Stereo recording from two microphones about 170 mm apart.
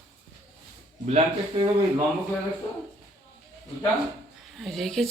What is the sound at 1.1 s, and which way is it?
Speech, 40° right (ahead or behind).